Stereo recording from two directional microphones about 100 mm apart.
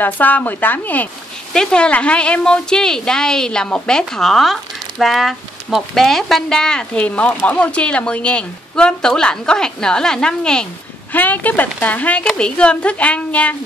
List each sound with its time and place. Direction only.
0.0 s a woman's voice: 20° left (ahead or behind)